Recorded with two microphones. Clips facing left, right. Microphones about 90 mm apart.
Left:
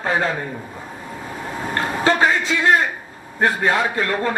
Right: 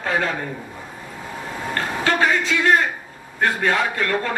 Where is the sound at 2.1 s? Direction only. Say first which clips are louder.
Left 2 dB; 30° left (ahead or behind).